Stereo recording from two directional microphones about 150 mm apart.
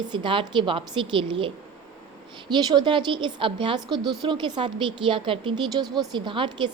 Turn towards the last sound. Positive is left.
turn(degrees=-30)  # may be behind; listen again after turning